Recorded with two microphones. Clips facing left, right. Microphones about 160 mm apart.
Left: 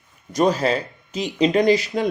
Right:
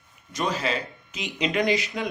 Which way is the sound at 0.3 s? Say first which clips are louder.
Left 8 dB; 40° left (ahead or behind).